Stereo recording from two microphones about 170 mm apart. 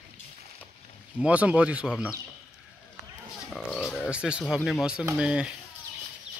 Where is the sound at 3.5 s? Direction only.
Centre (ahead or behind).